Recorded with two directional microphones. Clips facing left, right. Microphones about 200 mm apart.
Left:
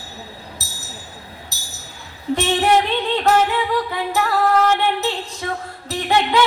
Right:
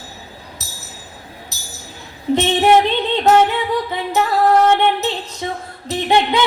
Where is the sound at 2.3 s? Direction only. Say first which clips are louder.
Right 4 dB; 20° right (ahead or behind).